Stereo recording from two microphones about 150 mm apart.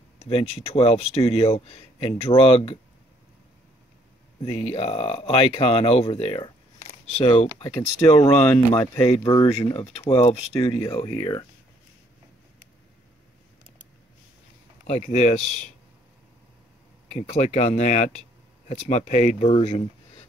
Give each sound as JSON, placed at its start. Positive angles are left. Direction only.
{"t": 0.2, "sound": "speech", "side_deg": 40}
{"t": 4.5, "sound": "speech", "side_deg": 40}
{"t": 6.8, "sound": "speech", "side_deg": 50}
{"t": 7.6, "sound": "speech", "side_deg": 25}
{"t": 11.1, "sound": "speech", "side_deg": 30}
{"t": 14.9, "sound": "speech", "side_deg": 50}
{"t": 17.1, "sound": "speech", "side_deg": 50}